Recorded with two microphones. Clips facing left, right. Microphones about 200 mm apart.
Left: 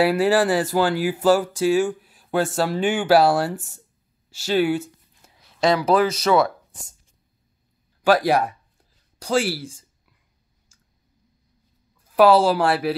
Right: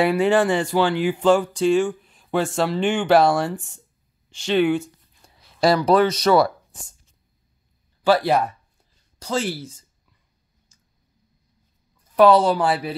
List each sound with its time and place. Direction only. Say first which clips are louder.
0.0 s speech: even; 5° left (ahead or behind)
4.3 s a sound: right 1 dB; 5° left (ahead or behind)
5.8 s speech: right 2 dB; 5° left (ahead or behind)
8.0 s speech: even; 10° left (ahead or behind)
12.2 s speech: even; 5° left (ahead or behind)